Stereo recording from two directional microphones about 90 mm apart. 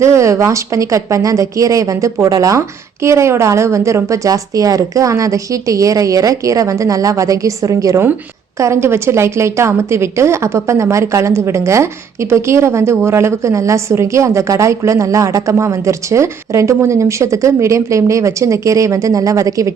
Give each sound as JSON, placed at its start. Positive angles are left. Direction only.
{"t": 0.0, "sound": "a woman's voice", "side_deg": -35}